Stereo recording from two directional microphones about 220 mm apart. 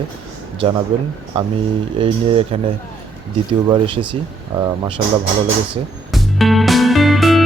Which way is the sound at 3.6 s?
25° right (ahead or behind).